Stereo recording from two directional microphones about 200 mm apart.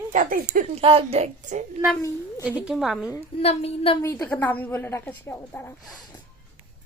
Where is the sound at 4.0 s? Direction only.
15° left (ahead or behind).